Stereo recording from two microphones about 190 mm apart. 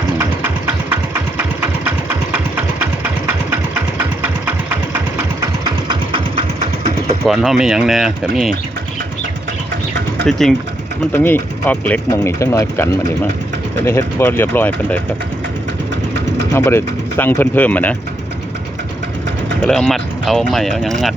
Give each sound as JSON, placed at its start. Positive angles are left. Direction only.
{"t": 5.9, "sound": "engine", "side_deg": -25}
{"t": 7.3, "sound": "speech", "side_deg": 0}
{"t": 10.2, "sound": "speech", "side_deg": 0}
{"t": 16.6, "sound": "speech", "side_deg": 15}
{"t": 19.6, "sound": "speech", "side_deg": 5}